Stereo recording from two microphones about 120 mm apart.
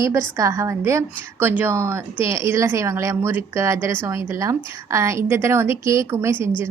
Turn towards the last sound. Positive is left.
turn(degrees=-20)  # may be behind; listen again after turning